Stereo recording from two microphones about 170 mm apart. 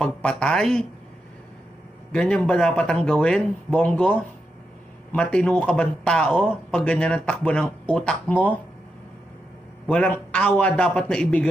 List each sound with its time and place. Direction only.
0.0 s speech: 5° left (ahead or behind)
2.1 s a man's voice: 5° left (ahead or behind)
9.8 s a man's voice: 5° left (ahead or behind)